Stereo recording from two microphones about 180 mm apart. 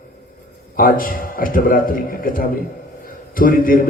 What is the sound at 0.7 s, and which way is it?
A man's voice, 50° left (ahead or behind).